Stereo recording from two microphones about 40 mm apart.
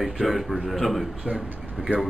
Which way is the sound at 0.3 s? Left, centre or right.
Centre.